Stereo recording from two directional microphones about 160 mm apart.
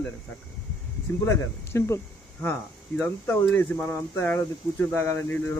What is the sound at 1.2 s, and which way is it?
Speech, 15° left (ahead or behind).